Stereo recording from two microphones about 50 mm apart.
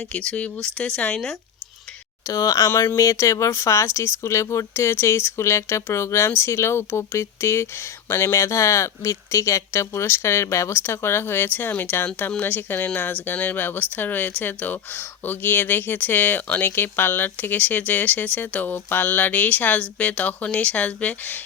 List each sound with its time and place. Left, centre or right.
0.2 s speech: left
2.3 s speech: left